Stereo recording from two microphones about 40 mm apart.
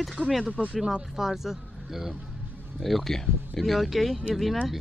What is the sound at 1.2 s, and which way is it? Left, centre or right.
Speech, centre.